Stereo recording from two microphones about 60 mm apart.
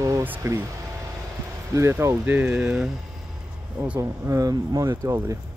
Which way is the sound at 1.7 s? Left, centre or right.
Right.